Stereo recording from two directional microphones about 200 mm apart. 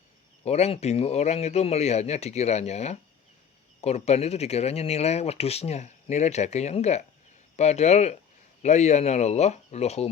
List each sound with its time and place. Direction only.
0.4 s speech: 30° left (ahead or behind)